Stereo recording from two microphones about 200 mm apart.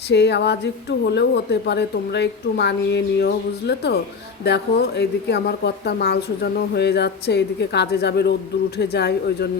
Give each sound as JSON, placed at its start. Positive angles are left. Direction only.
{"t": 0.1, "sound": "a woman's voice", "side_deg": 60}